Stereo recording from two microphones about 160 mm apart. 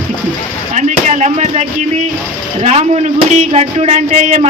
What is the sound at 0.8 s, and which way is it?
Speech, 45° right (ahead or behind).